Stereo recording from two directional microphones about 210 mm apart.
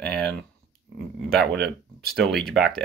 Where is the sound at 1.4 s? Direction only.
50° right (ahead or behind).